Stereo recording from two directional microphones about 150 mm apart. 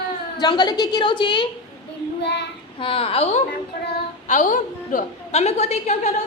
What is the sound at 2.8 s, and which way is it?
Speech, 40° left (ahead or behind).